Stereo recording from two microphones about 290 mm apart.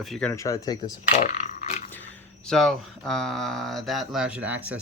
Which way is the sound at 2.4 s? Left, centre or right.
Centre.